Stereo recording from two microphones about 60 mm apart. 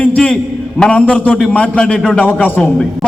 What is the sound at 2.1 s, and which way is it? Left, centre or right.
Speech, left.